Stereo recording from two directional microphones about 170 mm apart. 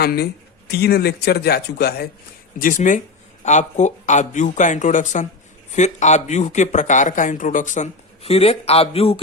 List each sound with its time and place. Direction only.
0.0 s speech: 65° left (ahead or behind)
2.6 s speech: 50° left (ahead or behind); by 9.2 s 35° left (ahead or behind)